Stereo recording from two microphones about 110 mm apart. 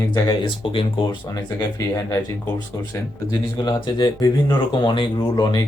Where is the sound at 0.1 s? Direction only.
45° left (ahead or behind).